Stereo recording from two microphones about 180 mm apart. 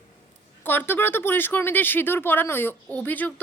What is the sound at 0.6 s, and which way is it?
Speech, 10° left (ahead or behind).